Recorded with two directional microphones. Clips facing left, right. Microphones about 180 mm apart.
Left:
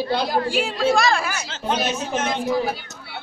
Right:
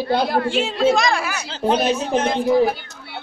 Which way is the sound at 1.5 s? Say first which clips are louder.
Right 7 dB; 35° right (ahead or behind).